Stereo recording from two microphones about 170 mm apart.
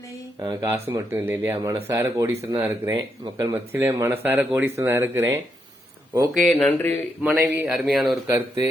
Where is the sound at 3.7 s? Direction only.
15° right (ahead or behind).